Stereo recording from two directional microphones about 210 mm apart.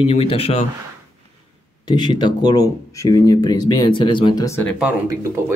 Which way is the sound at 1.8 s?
20° left (ahead or behind).